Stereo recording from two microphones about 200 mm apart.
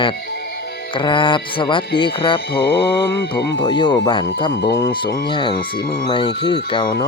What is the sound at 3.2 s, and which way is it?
Speech, 55° left (ahead or behind).